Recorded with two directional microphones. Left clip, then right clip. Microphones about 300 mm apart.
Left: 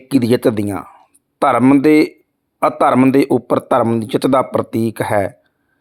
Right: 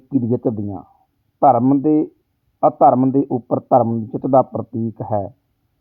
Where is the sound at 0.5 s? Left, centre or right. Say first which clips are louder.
Left 8 dB; left.